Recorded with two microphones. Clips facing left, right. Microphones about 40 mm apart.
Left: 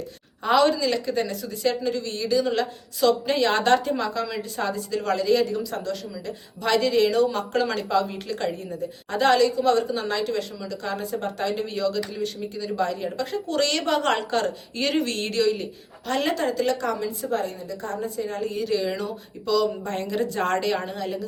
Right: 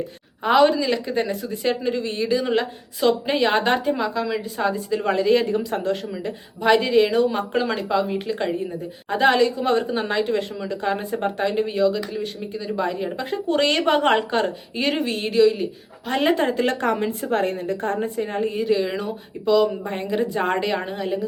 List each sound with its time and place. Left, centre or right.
0.4 s speech: centre; by 6.3 s right
6.6 s speech: right
16.1 s speech: right